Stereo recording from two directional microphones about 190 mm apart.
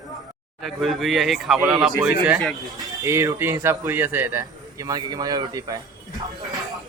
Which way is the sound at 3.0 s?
15° right (ahead or behind).